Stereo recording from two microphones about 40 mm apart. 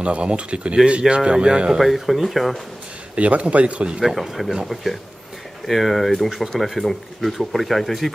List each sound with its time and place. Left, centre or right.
0.0 s speech: right
1.8 s speech: centre
3.2 s a man's voice: right
4.0 s speech: centre
5.7 s speech: centre